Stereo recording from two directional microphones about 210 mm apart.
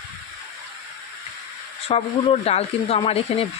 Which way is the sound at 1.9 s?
30° left (ahead or behind).